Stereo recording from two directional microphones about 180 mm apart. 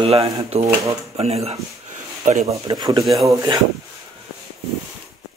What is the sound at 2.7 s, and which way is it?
Speech, 20° right (ahead or behind).